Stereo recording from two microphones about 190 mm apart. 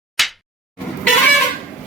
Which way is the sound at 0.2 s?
Centre (ahead or behind).